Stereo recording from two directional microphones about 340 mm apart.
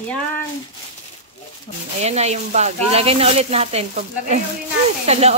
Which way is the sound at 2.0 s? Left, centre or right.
Centre.